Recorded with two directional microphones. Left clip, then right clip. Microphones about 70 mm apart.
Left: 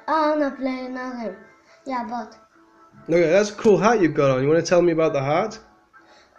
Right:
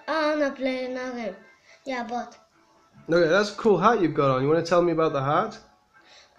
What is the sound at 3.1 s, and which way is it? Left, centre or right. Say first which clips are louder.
Speech: left 2 dB; right.